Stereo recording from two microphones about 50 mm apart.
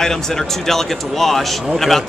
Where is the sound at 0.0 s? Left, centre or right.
Centre.